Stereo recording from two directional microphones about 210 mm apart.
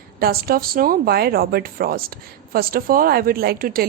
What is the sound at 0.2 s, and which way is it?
Speech, 45° right (ahead or behind).